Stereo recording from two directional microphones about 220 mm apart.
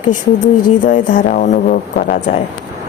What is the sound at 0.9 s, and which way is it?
Speech, 35° left (ahead or behind).